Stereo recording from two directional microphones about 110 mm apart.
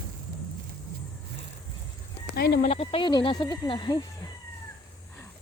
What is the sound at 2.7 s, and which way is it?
Speech, 60° left (ahead or behind).